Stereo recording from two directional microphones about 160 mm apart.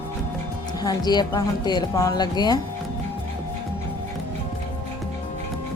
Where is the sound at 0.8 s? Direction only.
25° left (ahead or behind).